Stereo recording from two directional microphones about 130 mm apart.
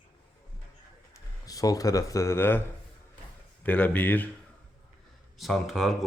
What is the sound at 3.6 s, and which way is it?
Speech, 10° left (ahead or behind).